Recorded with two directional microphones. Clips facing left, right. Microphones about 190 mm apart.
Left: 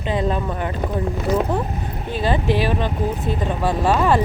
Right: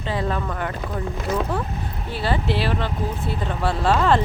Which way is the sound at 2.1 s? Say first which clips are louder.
Left 4 dB; 15° left (ahead or behind).